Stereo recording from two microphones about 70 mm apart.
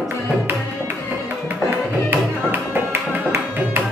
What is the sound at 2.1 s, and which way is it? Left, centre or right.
Music, right.